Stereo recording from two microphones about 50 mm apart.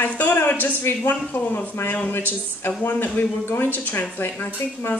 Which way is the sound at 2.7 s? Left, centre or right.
Left.